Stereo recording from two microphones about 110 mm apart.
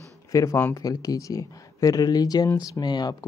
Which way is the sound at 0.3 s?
30° left (ahead or behind).